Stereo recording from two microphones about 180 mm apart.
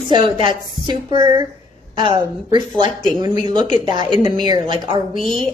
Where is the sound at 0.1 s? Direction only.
25° right (ahead or behind).